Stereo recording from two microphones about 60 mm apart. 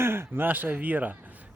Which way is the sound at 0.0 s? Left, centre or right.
Right.